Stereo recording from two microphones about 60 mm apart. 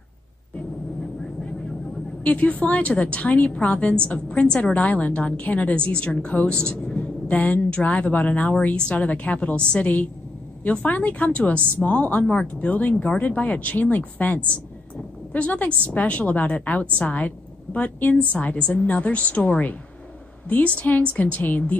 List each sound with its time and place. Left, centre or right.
2.2 s a woman's voice: left
12.9 s a woman's voice: centre